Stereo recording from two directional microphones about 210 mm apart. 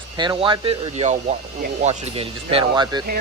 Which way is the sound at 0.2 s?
20° right (ahead or behind).